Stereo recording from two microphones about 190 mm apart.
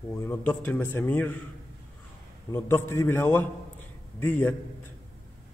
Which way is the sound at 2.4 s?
10° left (ahead or behind).